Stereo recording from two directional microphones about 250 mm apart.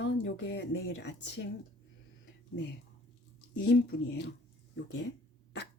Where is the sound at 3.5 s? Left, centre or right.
Left.